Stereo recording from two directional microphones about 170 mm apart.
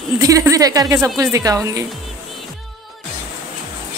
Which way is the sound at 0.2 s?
20° right (ahead or behind).